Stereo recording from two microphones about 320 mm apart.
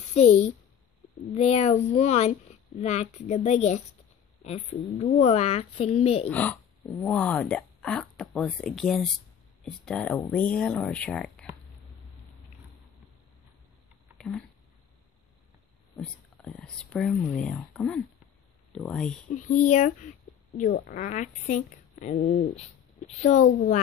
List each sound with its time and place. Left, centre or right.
0.1 s a woman's voice: centre
6.3 s speech: centre
14.1 s a sound: centre
16.0 s speech: centre
19.3 s a woman's voice: left